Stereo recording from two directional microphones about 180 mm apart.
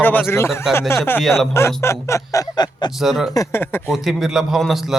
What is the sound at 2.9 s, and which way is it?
Speech, centre (ahead or behind).